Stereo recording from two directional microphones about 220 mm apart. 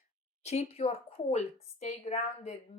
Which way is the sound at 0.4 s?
30° left (ahead or behind).